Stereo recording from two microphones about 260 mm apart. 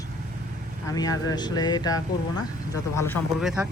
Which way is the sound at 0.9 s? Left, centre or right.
Centre.